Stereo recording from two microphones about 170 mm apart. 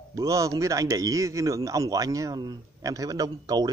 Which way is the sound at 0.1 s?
20° right (ahead or behind).